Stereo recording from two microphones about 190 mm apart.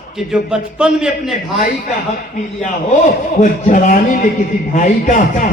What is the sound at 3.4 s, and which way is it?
A man's voice, 40° left (ahead or behind).